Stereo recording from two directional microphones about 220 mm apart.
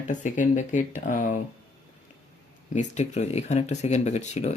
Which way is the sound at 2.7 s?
35° left (ahead or behind).